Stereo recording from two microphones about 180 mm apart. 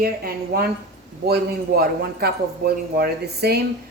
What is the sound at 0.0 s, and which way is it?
Speech, 55° right (ahead or behind).